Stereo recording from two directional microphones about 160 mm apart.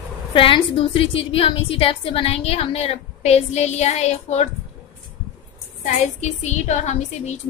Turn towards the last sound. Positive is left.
turn(degrees=45)  # may be behind; listen again after turning